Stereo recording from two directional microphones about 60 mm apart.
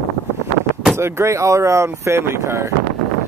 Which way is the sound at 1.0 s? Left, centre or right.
Right.